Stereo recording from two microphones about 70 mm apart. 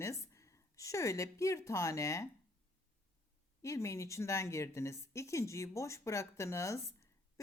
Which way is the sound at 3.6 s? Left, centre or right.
Left.